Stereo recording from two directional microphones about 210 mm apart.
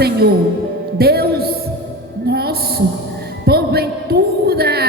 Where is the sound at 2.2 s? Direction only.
50° right (ahead or behind).